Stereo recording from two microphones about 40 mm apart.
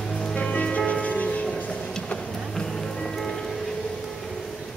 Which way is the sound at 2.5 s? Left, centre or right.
Centre.